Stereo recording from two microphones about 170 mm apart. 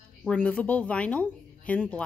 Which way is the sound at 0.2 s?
10° left (ahead or behind).